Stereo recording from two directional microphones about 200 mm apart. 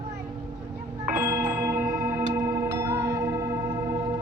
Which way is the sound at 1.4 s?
45° right (ahead or behind).